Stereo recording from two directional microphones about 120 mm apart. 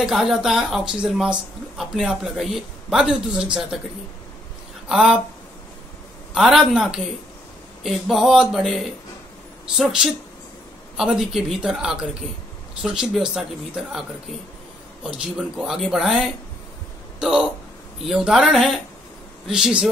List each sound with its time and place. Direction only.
0.0 s a woman's voice: 5° right (ahead or behind)
4.8 s speech: 5° right (ahead or behind)
6.3 s a woman's voice: 5° right (ahead or behind)
15.0 s a woman's voice: 10° right (ahead or behind)